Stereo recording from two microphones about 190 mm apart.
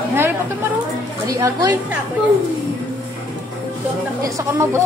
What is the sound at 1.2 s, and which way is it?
Speech, 20° right (ahead or behind).